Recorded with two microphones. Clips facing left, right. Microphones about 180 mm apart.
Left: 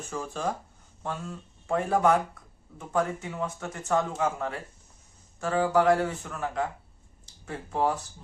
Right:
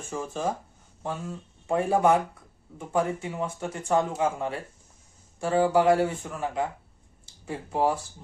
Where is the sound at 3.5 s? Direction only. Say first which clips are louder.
Right 3 dB; 10° right (ahead or behind).